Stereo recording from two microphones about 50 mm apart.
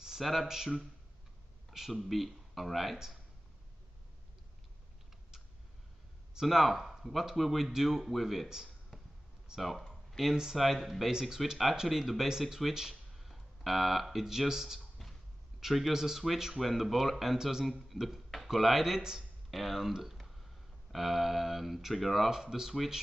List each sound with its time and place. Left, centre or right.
0.0 s speech: centre
1.7 s speech: centre
6.4 s speech: centre
8.9 s a sound: centre
9.6 s speech: centre
10.3 s speech: centre
10.6 s speech: centre
15.0 s a sound: centre
15.6 s speech: centre